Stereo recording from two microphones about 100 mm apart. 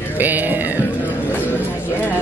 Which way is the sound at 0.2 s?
20° right (ahead or behind).